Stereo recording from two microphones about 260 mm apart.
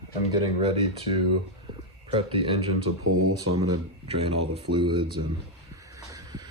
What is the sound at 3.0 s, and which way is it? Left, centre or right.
Speech, right.